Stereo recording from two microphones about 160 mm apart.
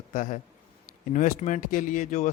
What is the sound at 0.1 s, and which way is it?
A man's voice, 55° left (ahead or behind).